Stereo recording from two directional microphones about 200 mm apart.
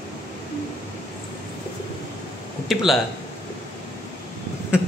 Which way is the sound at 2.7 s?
Centre (ahead or behind).